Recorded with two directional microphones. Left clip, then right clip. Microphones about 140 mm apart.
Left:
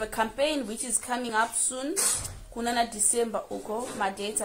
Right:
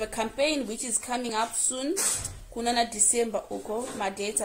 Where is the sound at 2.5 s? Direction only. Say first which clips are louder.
Right 1 dB; 20° right (ahead or behind).